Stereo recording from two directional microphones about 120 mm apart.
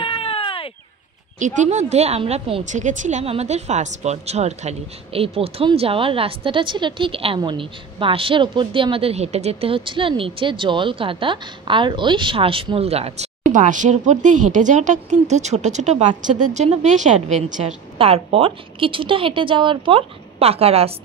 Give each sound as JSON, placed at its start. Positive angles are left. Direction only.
{"t": 0.0, "sound": "baby cry", "side_deg": 50}
{"t": 1.4, "sound": "a woman's voice", "side_deg": -90}
{"t": 2.6, "sound": "a woman's voice", "side_deg": -90}
{"t": 16.2, "sound": "a woman's voice", "side_deg": -90}
{"t": 17.9, "sound": "a woman's voice", "side_deg": -55}